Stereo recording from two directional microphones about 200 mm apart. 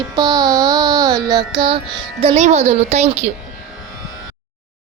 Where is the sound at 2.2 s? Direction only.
35° right (ahead or behind).